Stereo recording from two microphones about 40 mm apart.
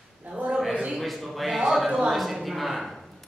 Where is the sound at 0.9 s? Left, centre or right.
Centre.